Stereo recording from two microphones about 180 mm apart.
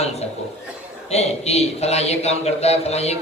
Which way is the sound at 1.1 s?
35° left (ahead or behind).